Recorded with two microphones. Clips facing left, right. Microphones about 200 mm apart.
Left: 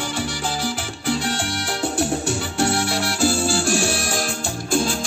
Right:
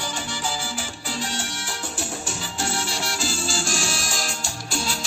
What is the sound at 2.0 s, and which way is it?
Music, 65° left (ahead or behind).